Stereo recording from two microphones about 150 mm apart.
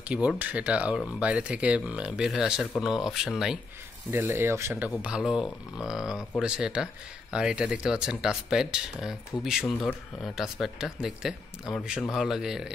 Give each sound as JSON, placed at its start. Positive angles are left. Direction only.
{"t": 0.1, "sound": "speech", "side_deg": -5}
{"t": 4.1, "sound": "speech", "side_deg": -15}
{"t": 5.0, "sound": "speech", "side_deg": -5}